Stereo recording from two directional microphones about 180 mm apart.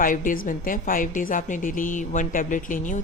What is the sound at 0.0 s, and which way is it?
A woman's voice, 50° left (ahead or behind).